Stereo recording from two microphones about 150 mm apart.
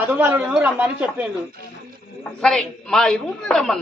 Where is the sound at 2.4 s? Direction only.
5° left (ahead or behind).